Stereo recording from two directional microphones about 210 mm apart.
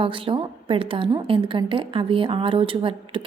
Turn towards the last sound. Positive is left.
turn(degrees=-25)  # may be behind; listen again after turning